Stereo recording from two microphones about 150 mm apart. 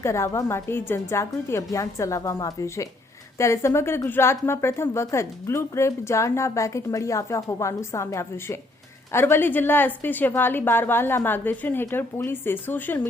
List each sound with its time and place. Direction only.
0.0 s a woman's voice: 20° left (ahead or behind)